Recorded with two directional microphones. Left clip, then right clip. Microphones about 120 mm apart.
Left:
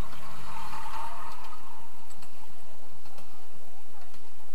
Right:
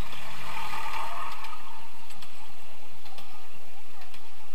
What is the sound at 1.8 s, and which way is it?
Tick-tock, 5° left (ahead or behind).